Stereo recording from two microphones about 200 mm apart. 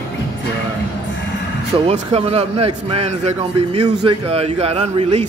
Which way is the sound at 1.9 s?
30° right (ahead or behind).